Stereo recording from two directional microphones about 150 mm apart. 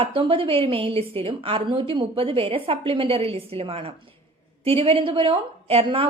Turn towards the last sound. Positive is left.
turn(degrees=-35)  # may be behind; listen again after turning